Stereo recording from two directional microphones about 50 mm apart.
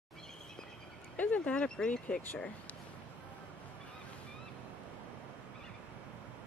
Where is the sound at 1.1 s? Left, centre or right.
Left.